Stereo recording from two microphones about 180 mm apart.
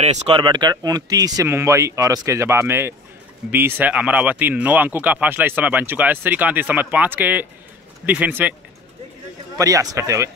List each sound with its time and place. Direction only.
0.0 s speech: 40° right (ahead or behind)
0.4 s speech: 25° right (ahead or behind)
9.6 s speech: 20° right (ahead or behind)